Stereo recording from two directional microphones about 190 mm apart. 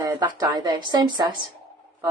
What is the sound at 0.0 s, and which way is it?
Speech, 20° right (ahead or behind).